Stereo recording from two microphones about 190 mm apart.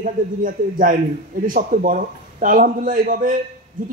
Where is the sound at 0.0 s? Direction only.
45° right (ahead or behind).